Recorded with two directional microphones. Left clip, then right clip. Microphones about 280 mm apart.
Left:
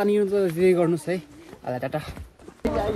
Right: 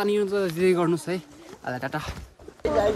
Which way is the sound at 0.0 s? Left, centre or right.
Centre.